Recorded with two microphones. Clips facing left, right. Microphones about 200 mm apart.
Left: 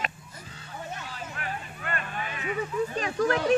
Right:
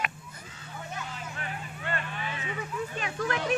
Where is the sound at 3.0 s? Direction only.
35° left (ahead or behind).